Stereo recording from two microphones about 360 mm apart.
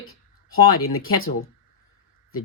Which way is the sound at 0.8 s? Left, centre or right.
Left.